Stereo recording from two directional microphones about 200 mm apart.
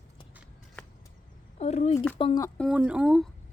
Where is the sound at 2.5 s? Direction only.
Centre (ahead or behind).